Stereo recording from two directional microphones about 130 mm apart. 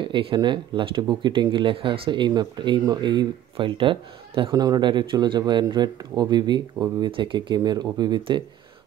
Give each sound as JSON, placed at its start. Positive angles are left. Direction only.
{"t": 0.0, "sound": "speech", "side_deg": -40}